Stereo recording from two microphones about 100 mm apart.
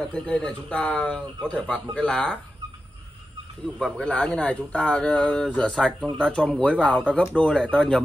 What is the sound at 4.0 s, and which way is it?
Speech, 10° left (ahead or behind).